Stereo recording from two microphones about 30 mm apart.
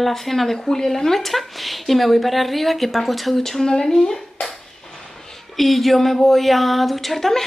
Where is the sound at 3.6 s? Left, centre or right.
Left.